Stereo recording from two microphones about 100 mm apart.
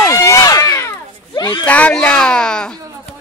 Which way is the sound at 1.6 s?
15° left (ahead or behind).